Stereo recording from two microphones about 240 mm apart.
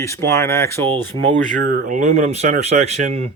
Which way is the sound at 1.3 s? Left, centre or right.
Right.